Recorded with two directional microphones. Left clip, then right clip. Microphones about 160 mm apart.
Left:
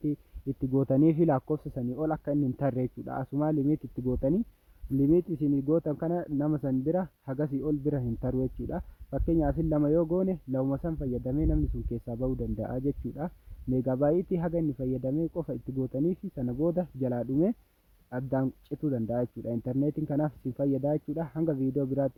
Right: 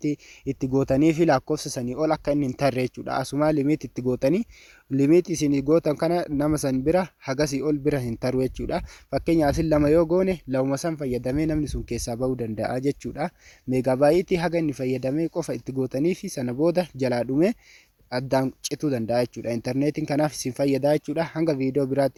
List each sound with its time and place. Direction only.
0.9 s speech: centre (ahead or behind)
1.7 s speech: 15° right (ahead or behind)
12.1 s speech: 30° right (ahead or behind)